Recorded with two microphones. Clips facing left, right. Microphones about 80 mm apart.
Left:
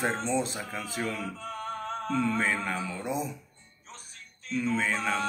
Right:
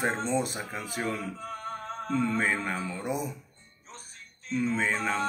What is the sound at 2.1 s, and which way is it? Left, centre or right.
Speech, centre.